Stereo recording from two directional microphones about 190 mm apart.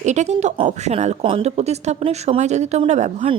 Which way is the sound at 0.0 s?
40° right (ahead or behind).